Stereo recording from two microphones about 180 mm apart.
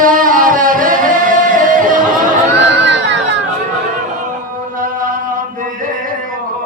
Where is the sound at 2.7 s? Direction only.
80° right.